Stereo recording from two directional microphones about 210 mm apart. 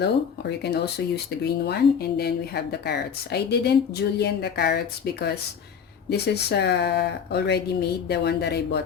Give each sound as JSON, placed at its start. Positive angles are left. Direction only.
{"t": 0.0, "sound": "speech", "side_deg": 50}